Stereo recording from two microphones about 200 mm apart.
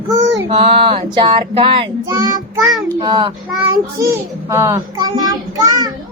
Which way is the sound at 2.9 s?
25° right (ahead or behind).